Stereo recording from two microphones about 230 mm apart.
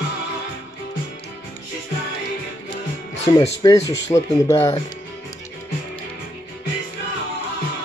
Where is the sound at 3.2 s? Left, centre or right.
Left.